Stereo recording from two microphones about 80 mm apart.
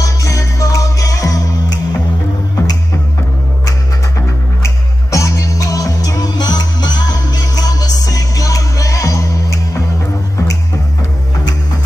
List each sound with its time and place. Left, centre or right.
0.0 s music: left
4.6 s music: left